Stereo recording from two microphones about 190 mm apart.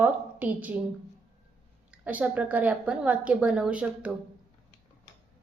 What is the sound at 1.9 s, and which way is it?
A woman's voice, 10° right (ahead or behind).